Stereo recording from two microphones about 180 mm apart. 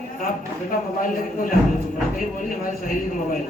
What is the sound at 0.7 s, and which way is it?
Speech, 50° left (ahead or behind).